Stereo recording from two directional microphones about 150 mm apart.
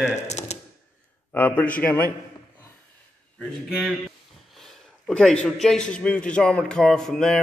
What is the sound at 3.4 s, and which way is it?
A man's voice, 5° right (ahead or behind).